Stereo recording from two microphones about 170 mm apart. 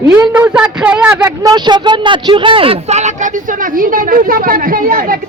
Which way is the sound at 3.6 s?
55° right (ahead or behind).